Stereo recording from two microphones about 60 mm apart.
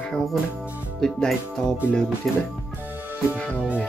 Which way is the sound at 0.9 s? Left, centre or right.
Centre.